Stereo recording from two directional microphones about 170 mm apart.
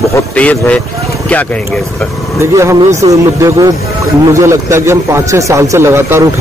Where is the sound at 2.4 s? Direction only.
15° right (ahead or behind).